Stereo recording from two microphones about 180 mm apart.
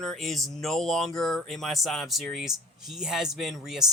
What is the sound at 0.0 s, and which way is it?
Speech, centre (ahead or behind).